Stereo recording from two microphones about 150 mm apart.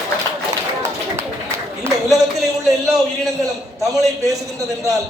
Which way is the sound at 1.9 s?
15° right (ahead or behind).